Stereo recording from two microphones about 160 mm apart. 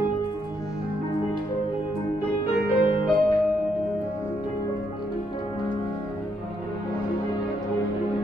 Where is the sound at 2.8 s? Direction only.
30° left (ahead or behind).